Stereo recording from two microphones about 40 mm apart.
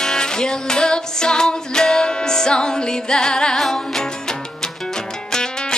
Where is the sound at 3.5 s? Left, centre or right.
Centre.